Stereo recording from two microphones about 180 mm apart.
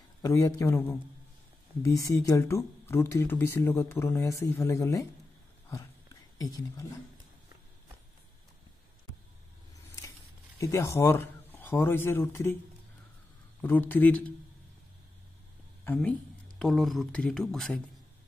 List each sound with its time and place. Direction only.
0.2 s speech: 15° left (ahead or behind)
6.3 s speech: 20° left (ahead or behind)
10.6 s speech: 15° left (ahead or behind)
13.6 s speech: 10° left (ahead or behind)
15.8 s speech: 10° left (ahead or behind)